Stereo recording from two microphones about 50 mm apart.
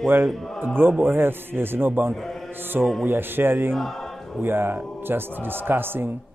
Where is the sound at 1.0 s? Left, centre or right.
Right.